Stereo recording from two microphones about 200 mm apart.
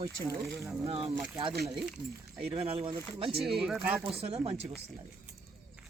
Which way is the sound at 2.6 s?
25° right (ahead or behind).